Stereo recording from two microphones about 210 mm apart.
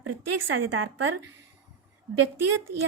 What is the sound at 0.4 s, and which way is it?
Speech, 70° right (ahead or behind).